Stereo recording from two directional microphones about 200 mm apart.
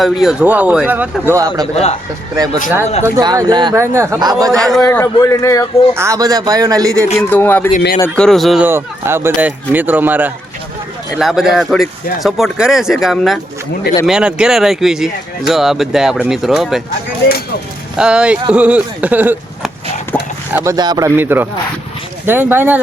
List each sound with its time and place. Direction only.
0.0 s speech: centre (ahead or behind)
1.7 s speech: 30° left (ahead or behind)
2.3 s speech: 20° right (ahead or behind)
4.5 s speech: centre (ahead or behind)
6.0 s speech: 15° right (ahead or behind)
7.2 s speech: 10° left (ahead or behind)
17.9 s speech: 5° right (ahead or behind)
20.1 s a sound: 10° left (ahead or behind)
20.5 s speech: 15° right (ahead or behind)